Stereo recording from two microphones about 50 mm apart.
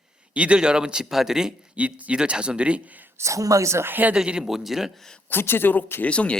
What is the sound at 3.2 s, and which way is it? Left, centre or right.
Speech, right.